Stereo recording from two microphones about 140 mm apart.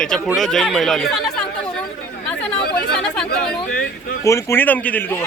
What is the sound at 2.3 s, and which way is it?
Chatter, 10° left (ahead or behind).